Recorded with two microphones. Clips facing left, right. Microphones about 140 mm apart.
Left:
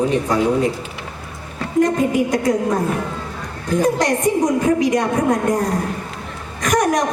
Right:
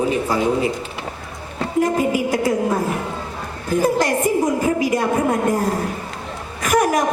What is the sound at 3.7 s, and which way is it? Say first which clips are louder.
A woman's voice: left 1 dB; 5° right (ahead or behind).